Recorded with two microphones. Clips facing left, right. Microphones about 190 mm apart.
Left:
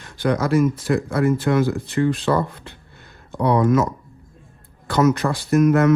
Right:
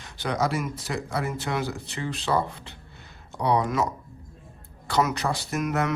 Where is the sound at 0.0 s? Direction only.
55° left (ahead or behind).